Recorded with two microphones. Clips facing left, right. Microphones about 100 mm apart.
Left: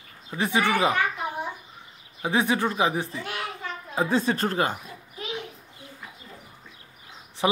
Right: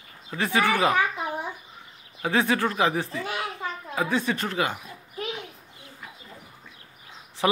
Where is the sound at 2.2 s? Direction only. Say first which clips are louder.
Even; 15° left (ahead or behind).